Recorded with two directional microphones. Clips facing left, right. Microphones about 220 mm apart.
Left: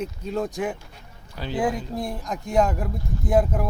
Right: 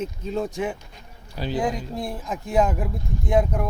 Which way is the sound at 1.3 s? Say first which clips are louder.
Right 3 dB; 10° right (ahead or behind).